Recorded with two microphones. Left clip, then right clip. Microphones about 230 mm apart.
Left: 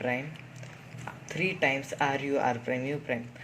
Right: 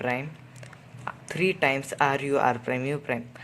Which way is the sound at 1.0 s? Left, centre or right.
Right.